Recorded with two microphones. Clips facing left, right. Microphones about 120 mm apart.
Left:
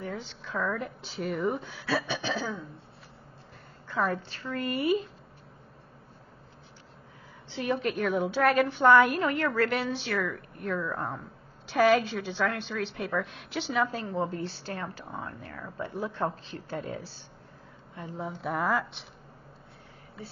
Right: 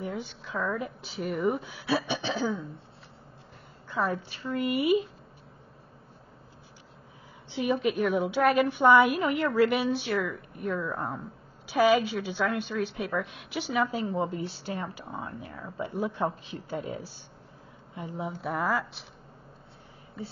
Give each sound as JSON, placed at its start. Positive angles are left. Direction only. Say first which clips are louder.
{"t": 0.0, "sound": "a woman's voice", "louder": "right 2 dB", "side_deg": -10}
{"t": 1.9, "sound": "speech", "louder": "right 2 dB", "side_deg": -15}
{"t": 3.9, "sound": "a woman's voice", "louder": "even", "side_deg": 0}
{"t": 4.3, "sound": "a woman's voice", "louder": "right 3 dB", "side_deg": -10}
{"t": 7.4, "sound": "a woman's voice", "louder": "right 3 dB", "side_deg": -10}